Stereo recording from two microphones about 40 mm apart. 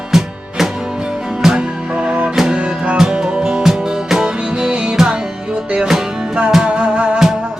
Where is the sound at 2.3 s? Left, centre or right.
Centre.